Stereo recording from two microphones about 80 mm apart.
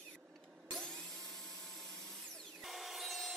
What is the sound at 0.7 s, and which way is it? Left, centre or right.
Vacuum cleaner, centre.